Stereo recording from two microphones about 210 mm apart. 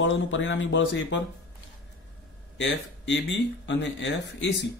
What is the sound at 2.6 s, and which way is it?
A man's voice, 55° left (ahead or behind).